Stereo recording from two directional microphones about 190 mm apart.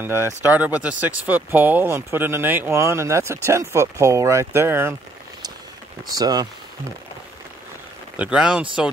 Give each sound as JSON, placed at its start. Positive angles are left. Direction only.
{"t": 0.0, "sound": "speech", "side_deg": -15}
{"t": 6.1, "sound": "speech", "side_deg": -20}
{"t": 8.2, "sound": "speech", "side_deg": -5}